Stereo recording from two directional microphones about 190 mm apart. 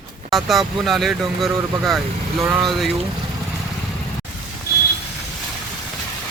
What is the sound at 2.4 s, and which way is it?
Speech, 15° right (ahead or behind).